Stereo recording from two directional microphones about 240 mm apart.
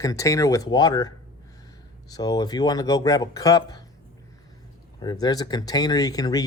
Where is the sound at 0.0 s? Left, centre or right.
Centre.